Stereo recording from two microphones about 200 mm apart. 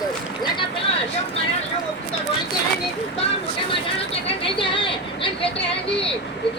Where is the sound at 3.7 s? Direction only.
30° left (ahead or behind).